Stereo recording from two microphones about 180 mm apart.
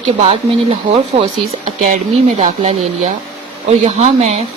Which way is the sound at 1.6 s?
40° right (ahead or behind).